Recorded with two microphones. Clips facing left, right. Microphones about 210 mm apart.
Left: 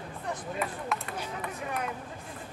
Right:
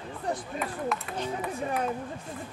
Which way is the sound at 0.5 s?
Centre (ahead or behind).